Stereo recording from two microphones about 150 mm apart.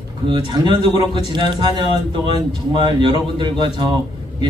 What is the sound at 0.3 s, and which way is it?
A man's voice, 30° right (ahead or behind).